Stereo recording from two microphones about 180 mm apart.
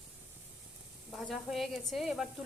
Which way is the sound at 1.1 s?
Centre (ahead or behind).